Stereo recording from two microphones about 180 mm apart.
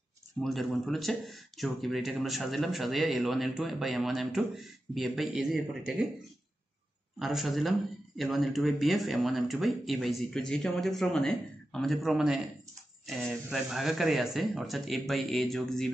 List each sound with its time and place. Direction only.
0.4 s speech: centre (ahead or behind)
7.2 s speech: centre (ahead or behind)